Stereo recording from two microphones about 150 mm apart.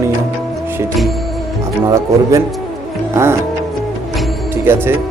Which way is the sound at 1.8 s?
20° right (ahead or behind).